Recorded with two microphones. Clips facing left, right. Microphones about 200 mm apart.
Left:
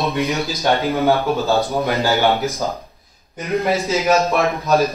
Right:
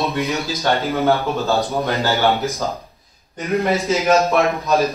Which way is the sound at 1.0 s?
Centre (ahead or behind).